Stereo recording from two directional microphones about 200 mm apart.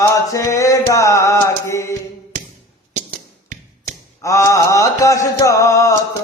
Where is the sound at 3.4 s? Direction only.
40° right (ahead or behind).